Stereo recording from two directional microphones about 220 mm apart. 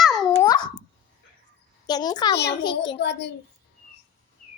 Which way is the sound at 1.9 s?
20° left (ahead or behind).